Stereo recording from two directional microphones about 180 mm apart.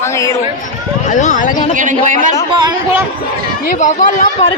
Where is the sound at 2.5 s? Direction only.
25° right (ahead or behind).